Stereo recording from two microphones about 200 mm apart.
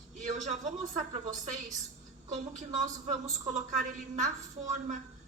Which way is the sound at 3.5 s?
35° right (ahead or behind).